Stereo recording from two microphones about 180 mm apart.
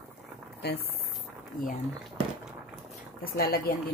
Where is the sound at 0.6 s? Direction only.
65° left (ahead or behind).